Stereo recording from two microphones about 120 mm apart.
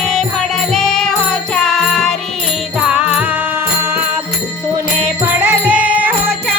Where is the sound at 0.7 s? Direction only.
5° left (ahead or behind).